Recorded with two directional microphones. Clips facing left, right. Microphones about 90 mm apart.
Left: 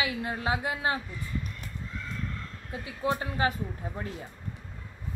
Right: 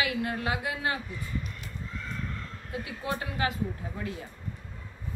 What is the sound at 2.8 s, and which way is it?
Speech, 30° left (ahead or behind).